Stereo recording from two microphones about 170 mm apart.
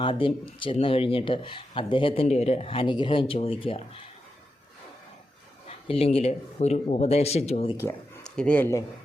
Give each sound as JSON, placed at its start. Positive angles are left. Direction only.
{"t": 0.0, "sound": "speech", "side_deg": 30}
{"t": 5.6, "sound": "speech", "side_deg": 35}
{"t": 8.2, "sound": "speech", "side_deg": 5}